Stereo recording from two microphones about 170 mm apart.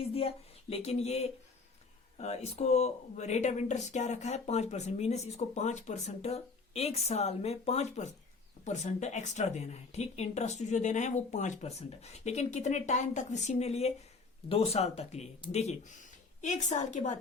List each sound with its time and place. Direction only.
0.0 s speech: 35° left (ahead or behind)